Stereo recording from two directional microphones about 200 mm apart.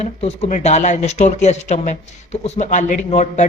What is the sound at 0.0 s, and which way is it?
Speech, 30° left (ahead or behind).